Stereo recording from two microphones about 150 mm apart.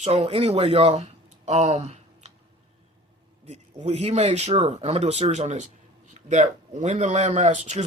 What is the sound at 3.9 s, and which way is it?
Speech, 45° right (ahead or behind).